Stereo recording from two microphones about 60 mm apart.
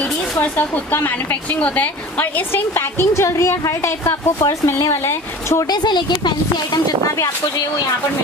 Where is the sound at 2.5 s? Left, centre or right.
Left.